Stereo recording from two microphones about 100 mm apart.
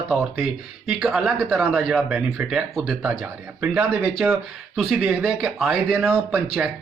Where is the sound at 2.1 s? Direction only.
10° right (ahead or behind).